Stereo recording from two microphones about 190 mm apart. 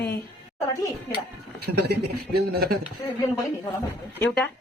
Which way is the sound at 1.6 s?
60° right (ahead or behind).